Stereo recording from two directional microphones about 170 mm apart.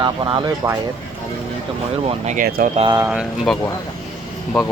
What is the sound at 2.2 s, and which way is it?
Speech, 55° right (ahead or behind).